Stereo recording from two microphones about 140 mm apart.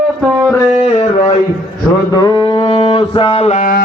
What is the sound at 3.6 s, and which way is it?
Music, 90° left.